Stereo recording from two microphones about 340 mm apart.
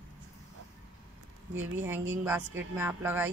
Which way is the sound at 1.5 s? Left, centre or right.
Right.